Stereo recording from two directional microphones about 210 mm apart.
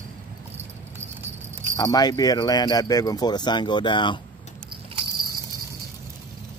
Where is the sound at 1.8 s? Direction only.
20° left (ahead or behind).